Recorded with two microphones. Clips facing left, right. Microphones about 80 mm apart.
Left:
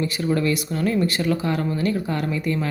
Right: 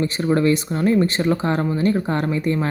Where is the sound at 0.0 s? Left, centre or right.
Right.